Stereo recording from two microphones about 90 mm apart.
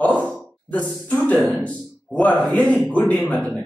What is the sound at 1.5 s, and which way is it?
Speech, 15° left (ahead or behind).